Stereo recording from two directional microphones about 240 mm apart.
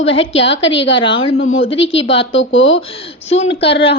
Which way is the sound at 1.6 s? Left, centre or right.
Left.